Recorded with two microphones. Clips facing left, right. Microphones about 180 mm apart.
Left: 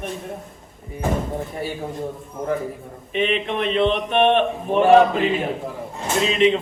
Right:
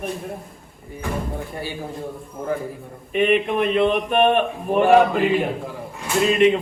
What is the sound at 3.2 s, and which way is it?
A man's voice, 10° right (ahead or behind).